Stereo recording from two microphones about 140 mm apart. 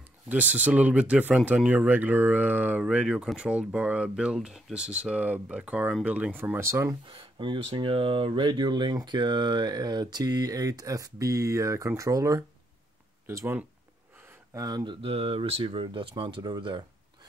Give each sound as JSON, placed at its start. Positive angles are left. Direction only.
{"t": 0.3, "sound": "speech", "side_deg": -10}
{"t": 7.1, "sound": "speech", "side_deg": -35}